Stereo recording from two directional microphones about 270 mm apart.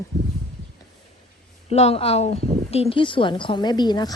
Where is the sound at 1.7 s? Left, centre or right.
Left.